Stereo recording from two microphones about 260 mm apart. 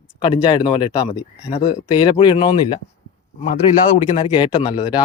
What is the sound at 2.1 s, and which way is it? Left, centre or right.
Speech, left.